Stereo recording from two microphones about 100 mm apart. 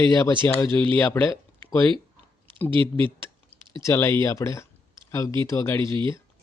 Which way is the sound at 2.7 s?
60° right (ahead or behind).